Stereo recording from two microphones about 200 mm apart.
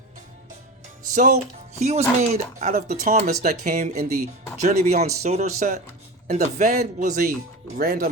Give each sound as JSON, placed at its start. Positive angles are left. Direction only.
{"t": 1.1, "sound": "speech", "side_deg": -40}